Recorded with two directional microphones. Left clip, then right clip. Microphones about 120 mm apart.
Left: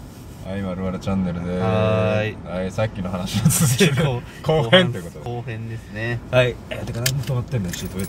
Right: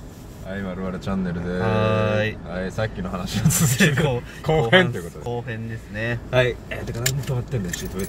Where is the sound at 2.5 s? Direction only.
40° left (ahead or behind).